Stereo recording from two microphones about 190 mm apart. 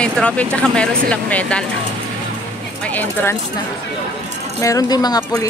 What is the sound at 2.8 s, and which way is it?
Speech, 10° left (ahead or behind).